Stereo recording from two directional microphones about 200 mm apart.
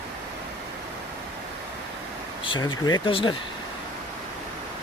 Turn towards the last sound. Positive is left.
turn(degrees=25)  # may be behind; listen again after turning